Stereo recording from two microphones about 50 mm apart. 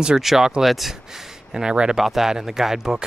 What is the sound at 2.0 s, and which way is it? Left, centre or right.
Speech, centre.